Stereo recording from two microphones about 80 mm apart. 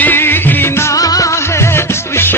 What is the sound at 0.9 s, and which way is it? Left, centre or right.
Music, left.